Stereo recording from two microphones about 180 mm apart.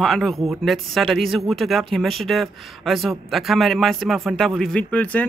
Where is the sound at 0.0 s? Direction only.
Centre (ahead or behind).